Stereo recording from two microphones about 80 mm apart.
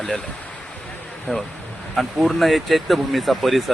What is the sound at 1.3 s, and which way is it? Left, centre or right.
Speech, left.